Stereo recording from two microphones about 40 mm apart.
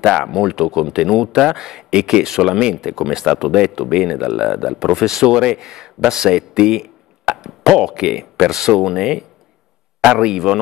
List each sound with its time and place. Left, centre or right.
0.1 s speech: centre
1.9 s speech: right
10.2 s speech: centre